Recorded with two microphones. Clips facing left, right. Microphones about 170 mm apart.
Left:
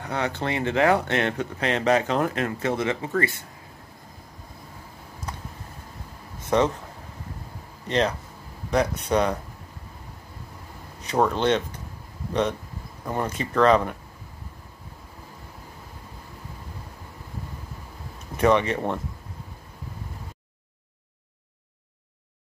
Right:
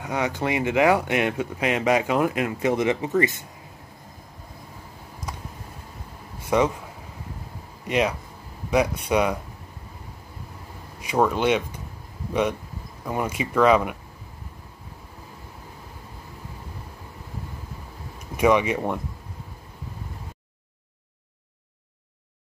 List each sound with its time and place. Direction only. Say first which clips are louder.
0.0 s speech: right 2 dB; 10° right (ahead or behind)
6.5 s speech: even; 10° right (ahead or behind)
7.8 s speech: right 1 dB; 10° right (ahead or behind)
11.2 s speech: right 1 dB; 10° right (ahead or behind)
18.3 s speech: right 1 dB; 10° right (ahead or behind)